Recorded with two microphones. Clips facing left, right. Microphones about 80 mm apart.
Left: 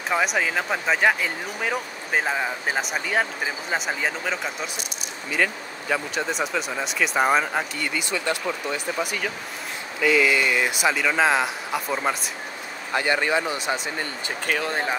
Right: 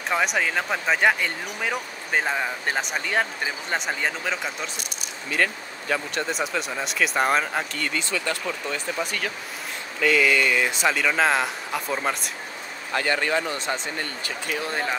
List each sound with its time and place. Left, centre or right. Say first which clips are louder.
0.1 s speech: left 1 dB; centre
12.9 s speech: left 1 dB; centre